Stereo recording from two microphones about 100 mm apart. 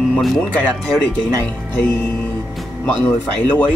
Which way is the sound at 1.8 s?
20° left (ahead or behind).